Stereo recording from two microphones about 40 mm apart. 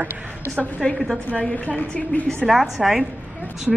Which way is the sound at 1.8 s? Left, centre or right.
Left.